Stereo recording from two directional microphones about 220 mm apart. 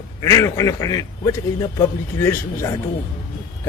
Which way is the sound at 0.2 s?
15° left (ahead or behind).